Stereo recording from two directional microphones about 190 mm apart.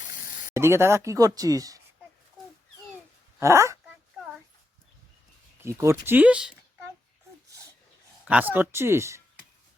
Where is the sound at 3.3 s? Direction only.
15° right (ahead or behind).